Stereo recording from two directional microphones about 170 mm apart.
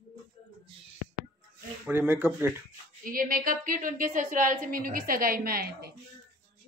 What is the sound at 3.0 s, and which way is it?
A woman's voice, 55° right (ahead or behind).